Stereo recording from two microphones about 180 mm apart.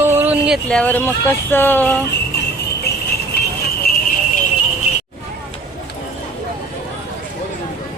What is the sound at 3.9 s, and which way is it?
Alarm, 60° left (ahead or behind).